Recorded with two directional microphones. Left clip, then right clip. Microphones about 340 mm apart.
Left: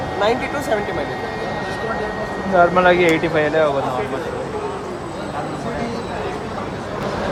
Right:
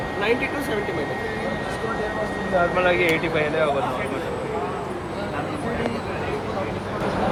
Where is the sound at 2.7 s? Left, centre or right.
Left.